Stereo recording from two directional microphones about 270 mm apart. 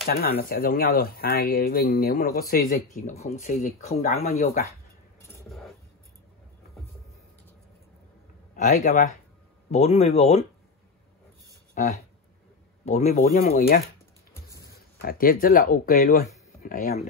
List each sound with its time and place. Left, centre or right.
0.0 s speech: left
8.5 s speech: left
11.7 s speech: left
15.0 s speech: left